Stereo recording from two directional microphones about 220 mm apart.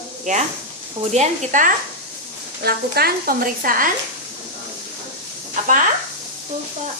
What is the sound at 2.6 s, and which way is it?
Speech, 45° right (ahead or behind).